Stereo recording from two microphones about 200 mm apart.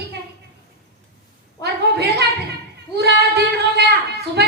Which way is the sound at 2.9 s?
55° right (ahead or behind).